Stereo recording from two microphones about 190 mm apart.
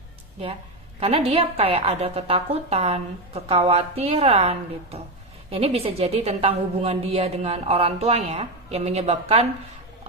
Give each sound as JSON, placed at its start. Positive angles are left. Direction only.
{"t": 0.9, "sound": "a woman's voice", "side_deg": -30}